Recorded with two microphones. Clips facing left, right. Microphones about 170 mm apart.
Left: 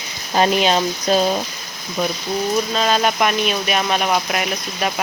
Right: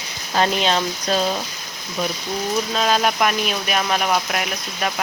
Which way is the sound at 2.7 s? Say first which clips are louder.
Left 1 dB; centre (ahead or behind).